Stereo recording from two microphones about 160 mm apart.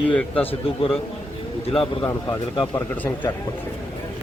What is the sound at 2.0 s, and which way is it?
Speech, 15° left (ahead or behind).